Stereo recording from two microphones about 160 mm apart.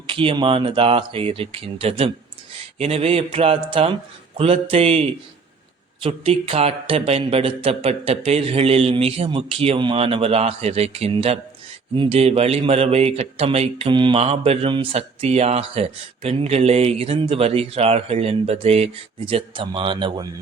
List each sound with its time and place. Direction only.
0.1 s speech: 35° right (ahead or behind)